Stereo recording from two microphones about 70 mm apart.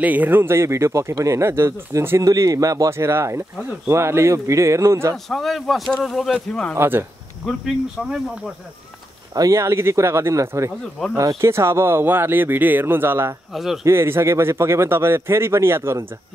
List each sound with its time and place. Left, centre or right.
0.0 s speech: right
5.1 s a man's voice: centre
6.7 s speech: right
9.3 s speech: right
9.6 s speech: right
13.5 s a man's voice: centre
13.8 s speech: right